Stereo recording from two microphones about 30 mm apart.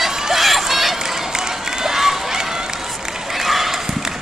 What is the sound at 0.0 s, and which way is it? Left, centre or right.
Run, centre.